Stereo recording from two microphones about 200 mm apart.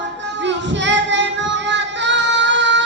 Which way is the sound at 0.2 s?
65° right (ahead or behind).